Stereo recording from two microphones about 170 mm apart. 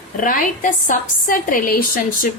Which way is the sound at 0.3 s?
50° left (ahead or behind).